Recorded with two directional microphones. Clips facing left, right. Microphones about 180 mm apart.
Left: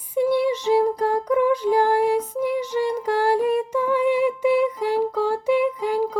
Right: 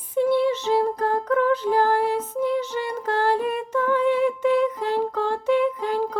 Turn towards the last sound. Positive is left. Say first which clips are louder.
# left 1 dB
turn(degrees=10)  # may be behind; listen again after turning